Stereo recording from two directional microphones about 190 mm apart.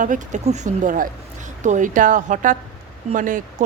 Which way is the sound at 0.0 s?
40° right (ahead or behind).